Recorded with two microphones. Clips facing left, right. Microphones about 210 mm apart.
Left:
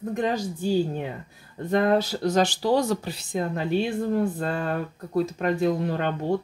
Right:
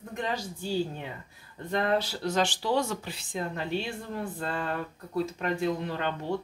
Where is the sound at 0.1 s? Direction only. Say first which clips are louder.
Left 7 dB; 45° left (ahead or behind).